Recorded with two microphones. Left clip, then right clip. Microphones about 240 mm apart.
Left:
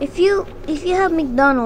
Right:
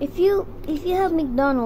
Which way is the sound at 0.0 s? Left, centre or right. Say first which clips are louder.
Left 3 dB; centre.